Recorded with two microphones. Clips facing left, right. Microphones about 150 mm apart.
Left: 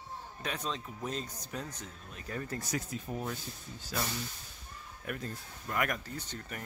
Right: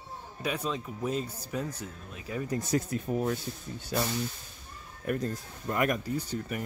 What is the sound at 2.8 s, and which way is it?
Speech, 60° right (ahead or behind).